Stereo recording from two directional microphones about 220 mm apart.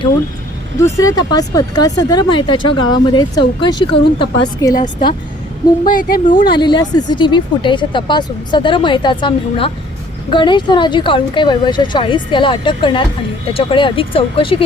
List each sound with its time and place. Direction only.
0.8 s speech: 15° left (ahead or behind)
5.8 s speech: 40° left (ahead or behind)
6.5 s speech: 20° left (ahead or behind)